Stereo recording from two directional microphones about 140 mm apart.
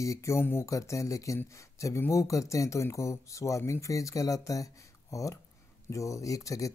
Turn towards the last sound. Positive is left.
turn(degrees=25)  # may be behind; listen again after turning